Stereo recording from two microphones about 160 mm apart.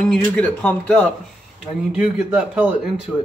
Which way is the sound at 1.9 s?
10° right (ahead or behind).